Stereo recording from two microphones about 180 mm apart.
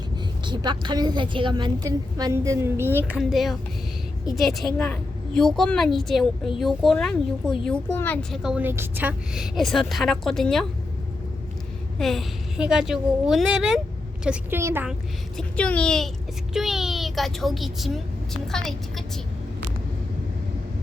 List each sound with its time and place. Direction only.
0.4 s a woman's voice: 25° right (ahead or behind)
3.1 s a woman's voice: 5° right (ahead or behind)
11.9 s a woman's voice: centre (ahead or behind)
15.4 s a woman's voice: 5° left (ahead or behind)